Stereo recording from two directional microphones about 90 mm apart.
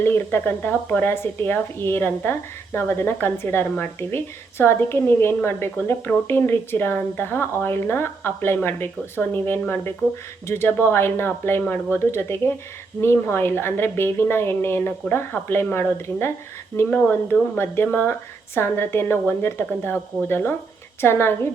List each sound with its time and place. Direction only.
0.0 s speech: 25° left (ahead or behind)
17.6 s speech: 25° left (ahead or behind)